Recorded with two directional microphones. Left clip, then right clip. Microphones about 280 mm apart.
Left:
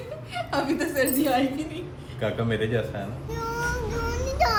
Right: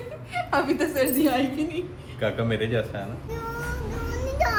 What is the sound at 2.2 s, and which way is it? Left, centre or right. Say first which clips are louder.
Speech: right 1 dB; centre.